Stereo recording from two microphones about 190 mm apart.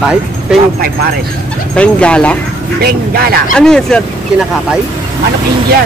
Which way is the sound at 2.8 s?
55° right (ahead or behind).